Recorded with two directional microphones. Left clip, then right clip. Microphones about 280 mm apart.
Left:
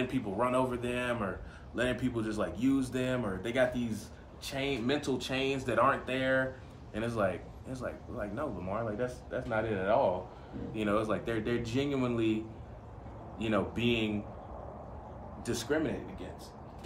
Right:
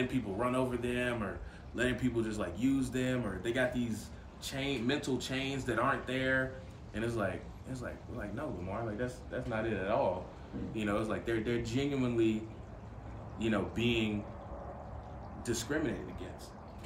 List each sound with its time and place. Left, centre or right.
0.0 s speech: centre
13.4 s speech: centre
15.4 s speech: centre